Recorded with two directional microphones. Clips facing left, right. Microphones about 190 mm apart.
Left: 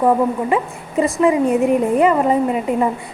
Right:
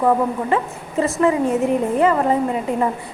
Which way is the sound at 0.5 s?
15° left (ahead or behind).